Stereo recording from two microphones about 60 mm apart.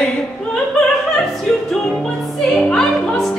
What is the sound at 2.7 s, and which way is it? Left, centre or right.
Music, centre.